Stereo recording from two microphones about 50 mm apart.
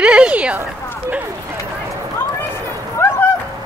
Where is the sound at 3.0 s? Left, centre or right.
Left.